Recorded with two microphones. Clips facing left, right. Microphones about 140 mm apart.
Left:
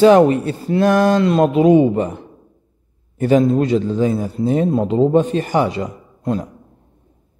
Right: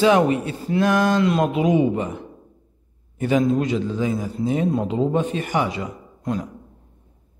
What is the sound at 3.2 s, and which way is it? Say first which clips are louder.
Speech: left 5 dB; 40° left (ahead or behind).